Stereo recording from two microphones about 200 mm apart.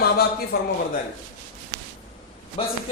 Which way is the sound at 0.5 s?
50° left (ahead or behind).